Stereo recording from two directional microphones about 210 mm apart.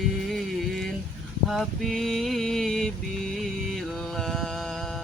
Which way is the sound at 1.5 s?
Centre (ahead or behind).